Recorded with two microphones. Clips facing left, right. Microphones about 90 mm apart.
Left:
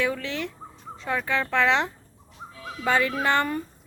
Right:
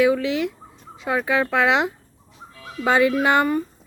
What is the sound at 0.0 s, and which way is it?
Speech, 10° right (ahead or behind).